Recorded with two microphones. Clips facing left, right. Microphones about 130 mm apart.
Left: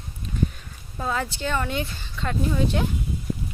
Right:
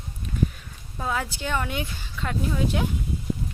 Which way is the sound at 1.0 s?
5° right (ahead or behind).